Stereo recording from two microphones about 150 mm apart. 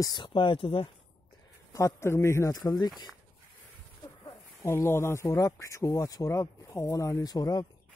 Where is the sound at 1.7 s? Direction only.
20° left (ahead or behind).